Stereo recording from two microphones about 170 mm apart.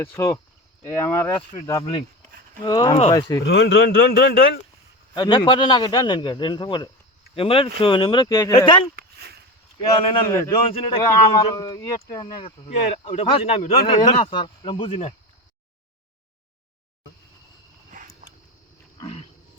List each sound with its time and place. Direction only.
0.0 s a man's voice: 15° left (ahead or behind)
3.5 s a man's voice: 80° left
5.1 s a man's voice: 25° left (ahead or behind)
9.0 s a sound: 70° right (ahead or behind)
10.2 s speech: 15° left (ahead or behind)
10.5 s a man's voice: 30° left (ahead or behind)
12.6 s speech: 40° left (ahead or behind)
17.9 s a sound: 45° right (ahead or behind)
18.9 s wild animals: 35° left (ahead or behind)